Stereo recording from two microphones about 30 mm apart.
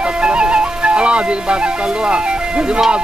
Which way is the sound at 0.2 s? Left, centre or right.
Right.